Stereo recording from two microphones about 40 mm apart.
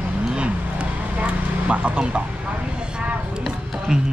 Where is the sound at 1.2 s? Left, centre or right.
Right.